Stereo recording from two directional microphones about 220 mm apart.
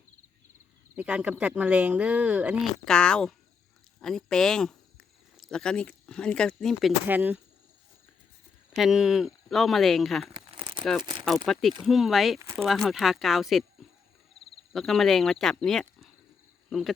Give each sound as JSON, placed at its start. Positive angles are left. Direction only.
{"t": 0.9, "sound": "speech", "side_deg": -5}
{"t": 8.7, "sound": "speech", "side_deg": 0}
{"t": 10.3, "sound": "crumpling", "side_deg": -25}
{"t": 11.0, "sound": "speech", "side_deg": -20}
{"t": 11.4, "sound": "speech", "side_deg": 0}
{"t": 12.4, "sound": "speech", "side_deg": -15}
{"t": 12.6, "sound": "speech", "side_deg": 0}
{"t": 14.7, "sound": "speech", "side_deg": 0}